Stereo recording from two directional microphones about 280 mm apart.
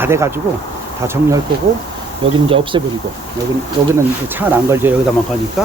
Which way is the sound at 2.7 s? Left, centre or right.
Centre.